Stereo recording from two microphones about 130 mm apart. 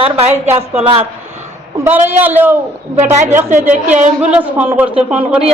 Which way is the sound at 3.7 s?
65° right (ahead or behind).